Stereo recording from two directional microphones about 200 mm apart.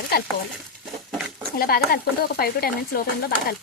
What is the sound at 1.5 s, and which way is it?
Speech, 50° left (ahead or behind).